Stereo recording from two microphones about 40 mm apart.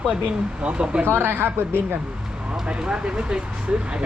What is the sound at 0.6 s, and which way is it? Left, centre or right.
Speech, right.